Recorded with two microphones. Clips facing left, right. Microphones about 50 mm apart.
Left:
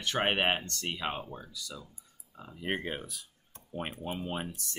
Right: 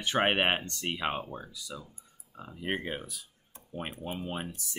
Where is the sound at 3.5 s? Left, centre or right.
Centre.